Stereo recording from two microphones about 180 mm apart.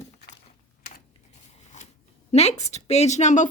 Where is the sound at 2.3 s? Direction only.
35° left (ahead or behind).